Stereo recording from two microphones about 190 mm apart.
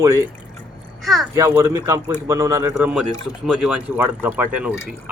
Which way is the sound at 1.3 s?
15° right (ahead or behind).